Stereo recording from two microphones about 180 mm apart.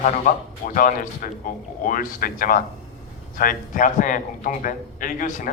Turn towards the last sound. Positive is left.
turn(degrees=50)  # may be behind; listen again after turning